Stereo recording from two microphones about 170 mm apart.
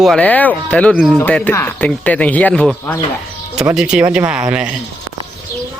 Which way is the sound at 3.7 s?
5° right (ahead or behind).